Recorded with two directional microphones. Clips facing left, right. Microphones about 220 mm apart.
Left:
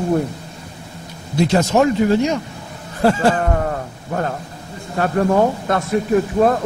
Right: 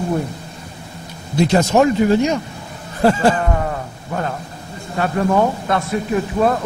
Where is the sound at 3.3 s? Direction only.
50° left (ahead or behind).